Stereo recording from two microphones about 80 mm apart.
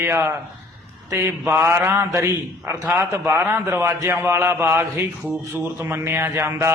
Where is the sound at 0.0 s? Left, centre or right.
Right.